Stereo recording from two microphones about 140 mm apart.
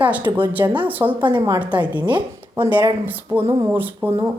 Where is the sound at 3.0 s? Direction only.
15° right (ahead or behind).